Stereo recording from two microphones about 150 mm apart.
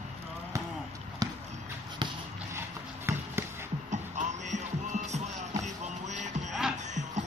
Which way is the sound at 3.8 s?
55° right (ahead or behind).